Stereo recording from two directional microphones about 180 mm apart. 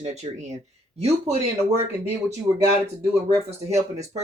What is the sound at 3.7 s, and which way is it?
Speech, 35° right (ahead or behind).